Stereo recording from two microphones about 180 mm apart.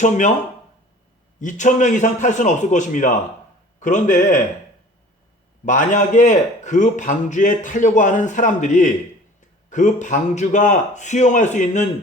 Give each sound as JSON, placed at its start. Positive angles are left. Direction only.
{"t": 0.0, "sound": "speech", "side_deg": 40}
{"t": 1.4, "sound": "a man's voice", "side_deg": 45}
{"t": 5.6, "sound": "a man's voice", "side_deg": 45}